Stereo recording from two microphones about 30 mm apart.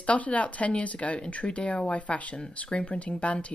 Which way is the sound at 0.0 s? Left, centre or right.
Left.